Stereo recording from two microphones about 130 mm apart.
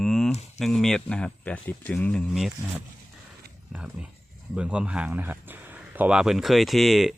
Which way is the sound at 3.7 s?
5° right (ahead or behind).